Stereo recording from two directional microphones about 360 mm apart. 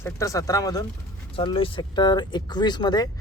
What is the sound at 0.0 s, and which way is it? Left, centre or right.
A man's voice, centre.